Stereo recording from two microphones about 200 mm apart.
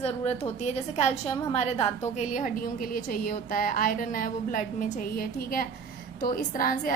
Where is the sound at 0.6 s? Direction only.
35° left (ahead or behind).